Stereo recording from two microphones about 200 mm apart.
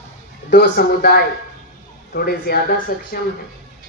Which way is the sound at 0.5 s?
55° left (ahead or behind).